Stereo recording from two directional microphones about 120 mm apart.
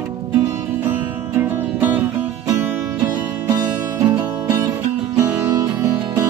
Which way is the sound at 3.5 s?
30° right (ahead or behind).